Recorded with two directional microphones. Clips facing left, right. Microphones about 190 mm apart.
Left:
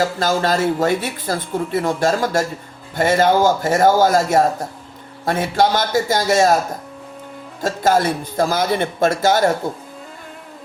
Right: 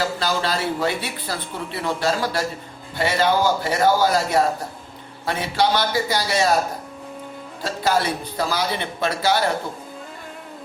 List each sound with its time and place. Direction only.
0.2 s speech: 45° left (ahead or behind)
7.6 s speech: 45° left (ahead or behind)